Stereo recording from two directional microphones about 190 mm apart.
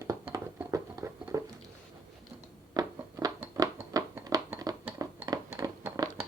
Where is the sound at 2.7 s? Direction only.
20° right (ahead or behind).